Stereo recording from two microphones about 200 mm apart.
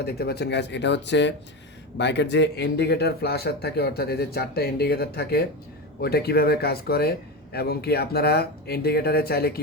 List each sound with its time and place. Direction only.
0.0 s speech: 50° left (ahead or behind)